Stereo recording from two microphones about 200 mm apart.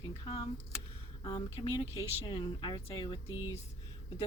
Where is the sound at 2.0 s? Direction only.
20° left (ahead or behind).